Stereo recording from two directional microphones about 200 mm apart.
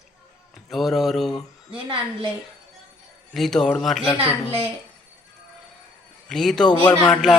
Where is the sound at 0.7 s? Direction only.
Centre (ahead or behind).